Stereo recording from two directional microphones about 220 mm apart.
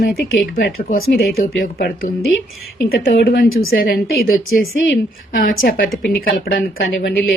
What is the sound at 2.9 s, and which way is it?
A woman's voice, 45° left (ahead or behind).